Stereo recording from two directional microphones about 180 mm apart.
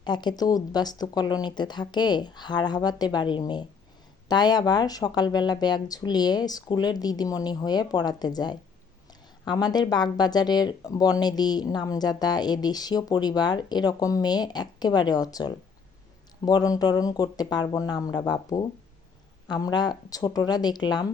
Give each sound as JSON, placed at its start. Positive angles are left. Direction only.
{"t": 0.0, "sound": "speech", "side_deg": 25}